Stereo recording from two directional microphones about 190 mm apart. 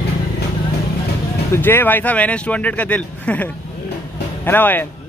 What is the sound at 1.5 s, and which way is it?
Speech, 10° left (ahead or behind).